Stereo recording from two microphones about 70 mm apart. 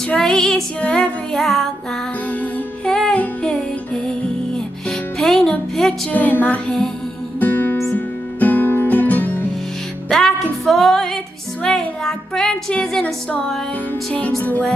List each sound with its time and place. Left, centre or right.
0.1 s music: centre
0.7 s music: centre
1.3 s music: centre
2.9 s music: centre
6.1 s music: left
10.0 s music: centre
11.6 s speech: centre